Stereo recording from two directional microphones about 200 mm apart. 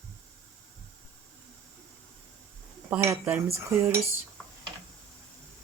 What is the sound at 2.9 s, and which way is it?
Speech, 10° right (ahead or behind).